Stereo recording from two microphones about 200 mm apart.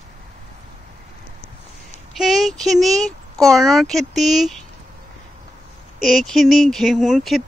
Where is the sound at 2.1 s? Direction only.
Centre (ahead or behind).